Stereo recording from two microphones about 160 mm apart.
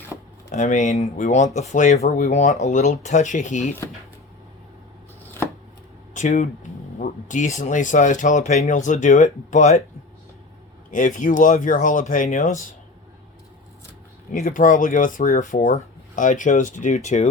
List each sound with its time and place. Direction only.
0.5 s speech: 50° left (ahead or behind)
6.1 s speech: 50° left (ahead or behind)
10.9 s speech: 55° left (ahead or behind)
14.3 s speech: 55° left (ahead or behind)